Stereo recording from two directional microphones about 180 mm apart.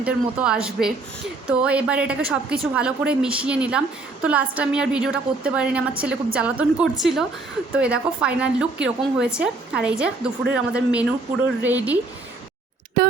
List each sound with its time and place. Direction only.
0.0 s a woman's voice: 5° right (ahead or behind)
13.0 s speech: 55° right (ahead or behind)